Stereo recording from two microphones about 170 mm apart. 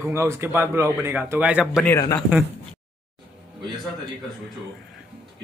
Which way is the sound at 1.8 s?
20° left (ahead or behind).